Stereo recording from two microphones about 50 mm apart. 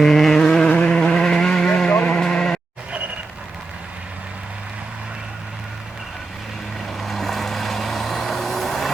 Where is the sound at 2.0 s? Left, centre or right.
Centre.